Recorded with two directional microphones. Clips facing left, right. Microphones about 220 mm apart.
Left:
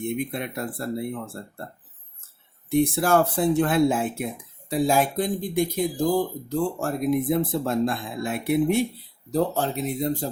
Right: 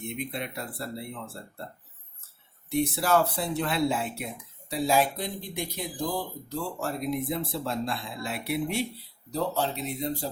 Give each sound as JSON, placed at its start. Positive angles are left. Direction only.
{"t": 0.0, "sound": "speech", "side_deg": 50}
{"t": 2.6, "sound": "speech", "side_deg": 50}